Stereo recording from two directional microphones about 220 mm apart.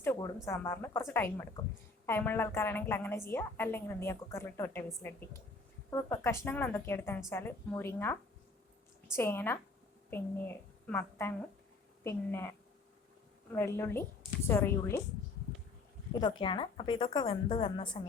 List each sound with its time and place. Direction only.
0.0 s a sound: 10° left (ahead or behind)
0.4 s a woman's voice: 15° left (ahead or behind)
5.9 s a woman's voice: 10° left (ahead or behind)
16.2 s a woman's voice: 20° left (ahead or behind)